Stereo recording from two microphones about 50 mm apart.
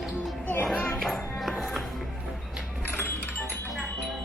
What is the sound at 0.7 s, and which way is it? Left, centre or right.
Music, centre.